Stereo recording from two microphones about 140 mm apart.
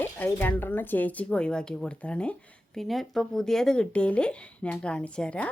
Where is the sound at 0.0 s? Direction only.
15° left (ahead or behind).